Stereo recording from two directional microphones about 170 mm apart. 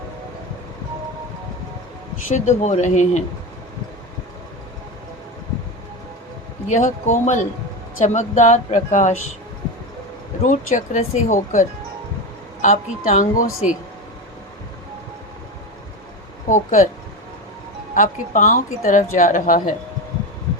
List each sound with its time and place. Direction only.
2.2 s a woman's voice: 45° left (ahead or behind)
6.7 s a woman's voice: 45° left (ahead or behind)
10.4 s a woman's voice: 50° left (ahead or behind)
12.6 s a woman's voice: 45° left (ahead or behind)
16.5 s a woman's voice: 50° left (ahead or behind)
17.9 s a woman's voice: 50° left (ahead or behind)